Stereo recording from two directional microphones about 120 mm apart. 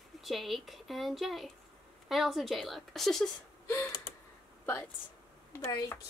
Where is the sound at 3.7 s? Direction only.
25° left (ahead or behind).